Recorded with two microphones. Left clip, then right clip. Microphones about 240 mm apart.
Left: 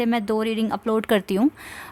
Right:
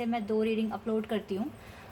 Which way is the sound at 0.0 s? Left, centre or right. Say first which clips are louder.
Left 7 dB; left.